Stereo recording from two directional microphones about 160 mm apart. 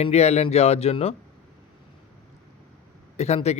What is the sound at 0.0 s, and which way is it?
Speech, 40° left (ahead or behind).